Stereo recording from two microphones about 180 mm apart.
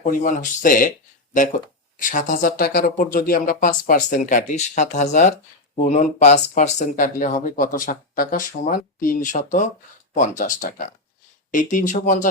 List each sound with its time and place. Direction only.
0.0 s speech: 45° left (ahead or behind)